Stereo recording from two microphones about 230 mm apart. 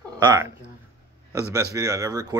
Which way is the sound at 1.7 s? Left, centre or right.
Centre.